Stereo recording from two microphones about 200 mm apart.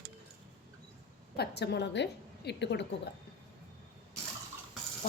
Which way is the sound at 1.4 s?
55° left (ahead or behind).